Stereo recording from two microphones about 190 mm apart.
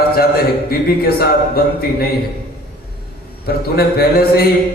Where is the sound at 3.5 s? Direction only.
55° left (ahead or behind).